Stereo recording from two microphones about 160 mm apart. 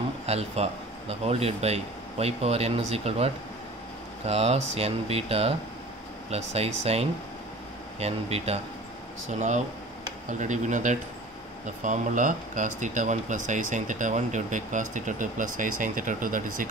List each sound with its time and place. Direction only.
0.3 s a man's voice: 40° right (ahead or behind)
4.3 s a man's voice: 40° right (ahead or behind); by 16.6 s 55° right (ahead or behind)